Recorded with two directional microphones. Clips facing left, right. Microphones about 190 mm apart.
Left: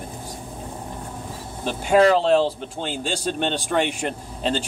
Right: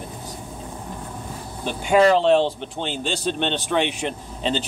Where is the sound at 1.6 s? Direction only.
40° left (ahead or behind).